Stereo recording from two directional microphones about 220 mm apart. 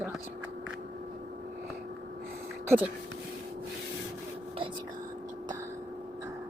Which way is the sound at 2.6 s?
5° right (ahead or behind).